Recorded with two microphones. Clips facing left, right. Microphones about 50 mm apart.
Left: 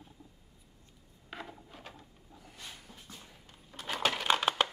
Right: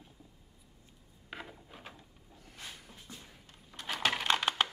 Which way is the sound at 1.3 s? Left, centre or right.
Centre.